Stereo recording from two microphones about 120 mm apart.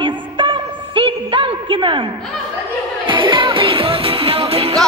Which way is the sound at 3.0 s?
45° right (ahead or behind).